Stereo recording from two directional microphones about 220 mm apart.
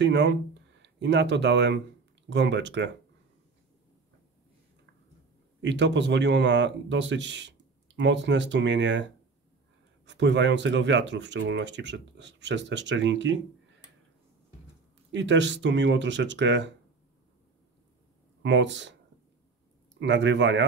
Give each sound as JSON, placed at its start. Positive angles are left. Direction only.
{"t": 0.0, "sound": "speech", "side_deg": -50}
{"t": 5.6, "sound": "speech", "side_deg": -55}
{"t": 10.0, "sound": "speech", "side_deg": -55}
{"t": 15.0, "sound": "speech", "side_deg": -55}
{"t": 18.4, "sound": "speech", "side_deg": -55}
{"t": 20.0, "sound": "speech", "side_deg": -55}